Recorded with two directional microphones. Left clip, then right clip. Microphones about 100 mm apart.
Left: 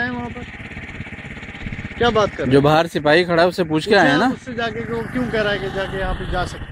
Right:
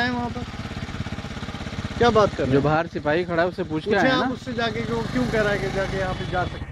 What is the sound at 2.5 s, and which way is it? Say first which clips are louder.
Speech: left 7 dB; 25° left (ahead or behind).